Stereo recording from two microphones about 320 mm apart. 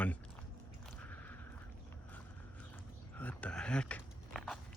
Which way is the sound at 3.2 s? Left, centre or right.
Centre.